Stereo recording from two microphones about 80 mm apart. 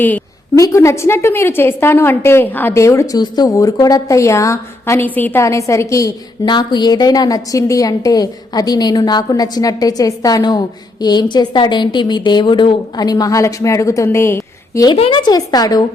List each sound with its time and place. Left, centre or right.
0.5 s a woman's voice: left
2.7 s a woman's voice: left
3.2 s a woman's voice: left
3.5 s a woman's voice: left
4.9 s a woman's voice: left
5.4 s a woman's voice: left
6.4 s a woman's voice: left
11.0 s a woman's voice: left
14.8 s a woman's voice: left